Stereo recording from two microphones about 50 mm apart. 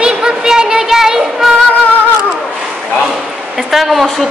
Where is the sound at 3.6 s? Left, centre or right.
Centre.